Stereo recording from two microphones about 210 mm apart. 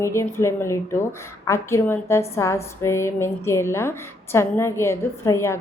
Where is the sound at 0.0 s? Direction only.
15° left (ahead or behind).